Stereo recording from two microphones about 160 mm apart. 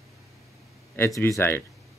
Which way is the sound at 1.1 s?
20° left (ahead or behind).